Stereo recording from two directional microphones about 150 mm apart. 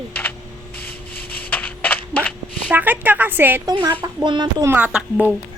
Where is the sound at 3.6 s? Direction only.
25° right (ahead or behind).